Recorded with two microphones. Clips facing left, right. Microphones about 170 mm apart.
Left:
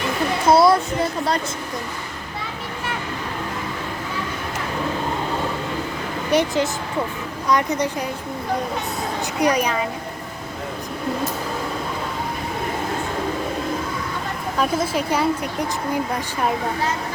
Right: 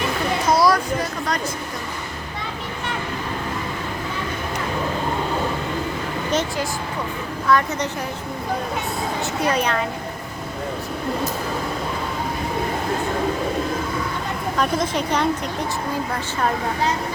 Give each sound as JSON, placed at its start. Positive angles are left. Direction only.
{"t": 0.4, "sound": "a child's voice", "side_deg": 25}
{"t": 6.3, "sound": "a woman's voice", "side_deg": 10}
{"t": 9.4, "sound": "a woman's voice", "side_deg": 10}
{"t": 14.6, "sound": "a woman's voice", "side_deg": 5}